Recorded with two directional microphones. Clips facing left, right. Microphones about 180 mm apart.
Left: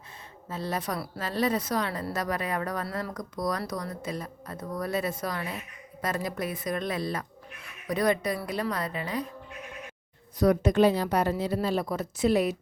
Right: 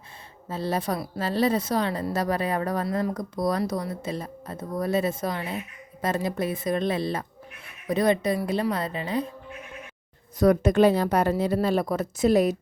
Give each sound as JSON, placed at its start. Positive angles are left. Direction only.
{"t": 0.4, "sound": "speech", "side_deg": -30}
{"t": 10.4, "sound": "a woman's voice", "side_deg": -50}